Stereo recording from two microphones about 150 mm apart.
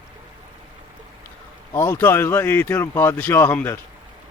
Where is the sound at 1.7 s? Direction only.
15° left (ahead or behind).